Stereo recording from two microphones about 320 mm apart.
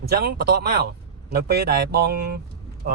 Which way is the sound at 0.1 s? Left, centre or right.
Right.